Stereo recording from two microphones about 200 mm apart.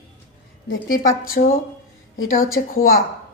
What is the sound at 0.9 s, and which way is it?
Speech, 45° left (ahead or behind).